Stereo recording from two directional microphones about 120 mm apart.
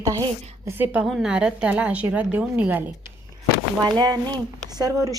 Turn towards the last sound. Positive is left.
turn(degrees=-30)  # may be behind; listen again after turning